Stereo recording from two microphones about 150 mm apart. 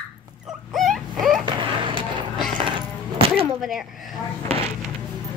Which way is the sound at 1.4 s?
30° right (ahead or behind).